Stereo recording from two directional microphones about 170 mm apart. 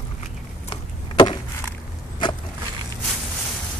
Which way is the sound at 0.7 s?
25° left (ahead or behind).